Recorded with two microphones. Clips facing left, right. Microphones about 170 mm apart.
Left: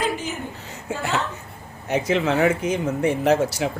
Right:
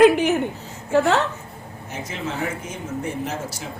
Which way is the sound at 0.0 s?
65° right (ahead or behind).